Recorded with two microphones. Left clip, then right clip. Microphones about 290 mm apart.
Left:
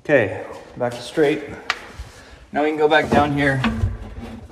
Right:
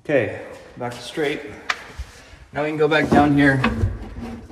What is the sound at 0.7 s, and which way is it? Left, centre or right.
Speech, centre.